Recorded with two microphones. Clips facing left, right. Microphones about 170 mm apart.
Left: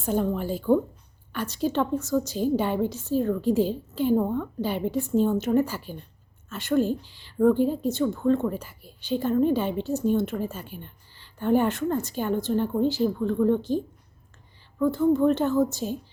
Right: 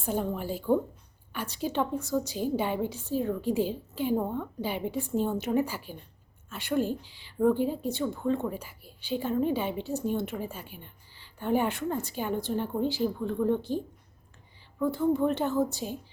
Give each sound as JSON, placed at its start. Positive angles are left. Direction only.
{"t": 0.0, "sound": "a woman's voice", "side_deg": -10}
{"t": 14.8, "sound": "a woman's voice", "side_deg": -10}